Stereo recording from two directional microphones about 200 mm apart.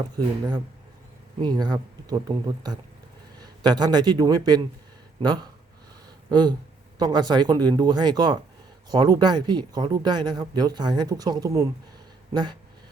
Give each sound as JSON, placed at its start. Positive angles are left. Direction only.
{"t": 0.0, "sound": "a man's voice", "side_deg": -20}